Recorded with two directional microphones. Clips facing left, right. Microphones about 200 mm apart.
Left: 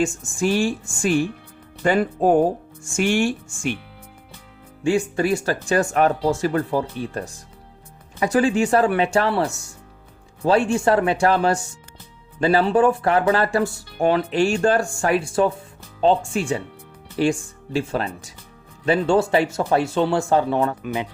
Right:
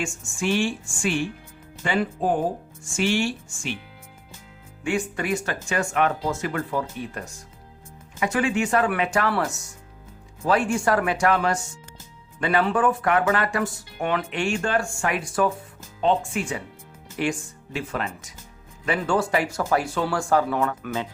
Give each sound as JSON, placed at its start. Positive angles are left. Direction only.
{"t": 0.0, "sound": "speech", "side_deg": 40}
{"t": 4.8, "sound": "speech", "side_deg": 30}